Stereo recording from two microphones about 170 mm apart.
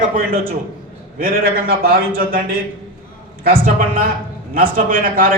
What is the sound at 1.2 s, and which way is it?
A man's voice, 60° right (ahead or behind).